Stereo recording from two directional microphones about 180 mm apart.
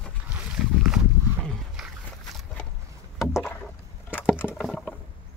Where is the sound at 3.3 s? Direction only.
10° left (ahead or behind).